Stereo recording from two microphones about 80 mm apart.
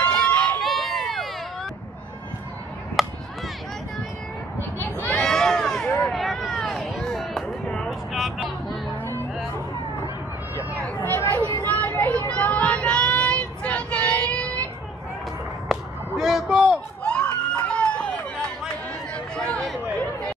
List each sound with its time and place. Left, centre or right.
0.0 s run: centre
0.6 s run: centre
3.0 s chop: centre
5.0 s a sound: centre
7.7 s vehicle: centre
9.0 s music: left
11.1 s a sound: left
11.7 s vehicle: centre
12.8 s child singing: centre
15.7 s whip: centre
17.0 s a sound: centre